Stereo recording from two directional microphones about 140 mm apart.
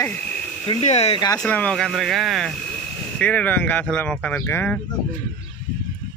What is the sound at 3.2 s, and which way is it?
Speech, 10° left (ahead or behind).